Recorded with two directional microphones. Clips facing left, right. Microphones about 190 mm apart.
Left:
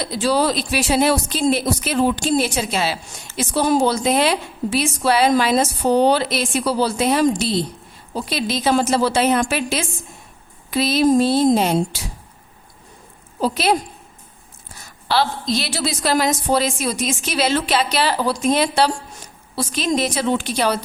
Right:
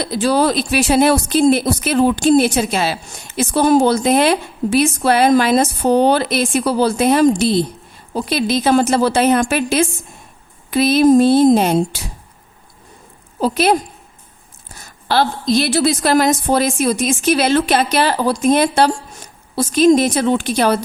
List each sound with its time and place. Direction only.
0.0 s speech: 55° right (ahead or behind)
13.4 s speech: 55° right (ahead or behind)
15.0 s speech: 50° right (ahead or behind)